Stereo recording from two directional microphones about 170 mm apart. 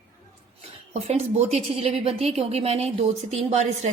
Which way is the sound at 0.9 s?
35° right (ahead or behind).